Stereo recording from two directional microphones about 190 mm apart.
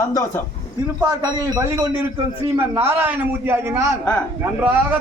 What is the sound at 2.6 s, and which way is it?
A man's voice, 10° right (ahead or behind).